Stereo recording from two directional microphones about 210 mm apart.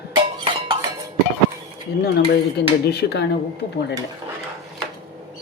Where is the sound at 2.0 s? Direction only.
50° left (ahead or behind).